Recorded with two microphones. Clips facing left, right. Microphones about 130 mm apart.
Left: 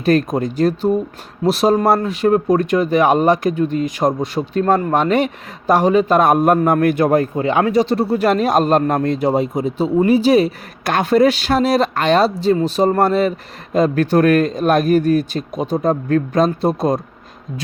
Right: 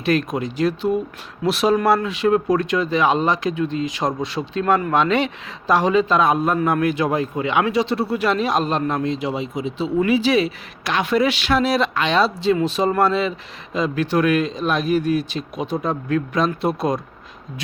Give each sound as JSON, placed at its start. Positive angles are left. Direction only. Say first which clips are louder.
{"t": 0.0, "sound": "speech", "louder": "left 5 dB", "side_deg": 45}
{"t": 7.3, "sound": "speech", "louder": "left 4 dB", "side_deg": 40}